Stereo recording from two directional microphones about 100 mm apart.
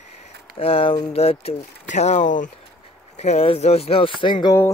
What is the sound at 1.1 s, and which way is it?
Speech, 90° left.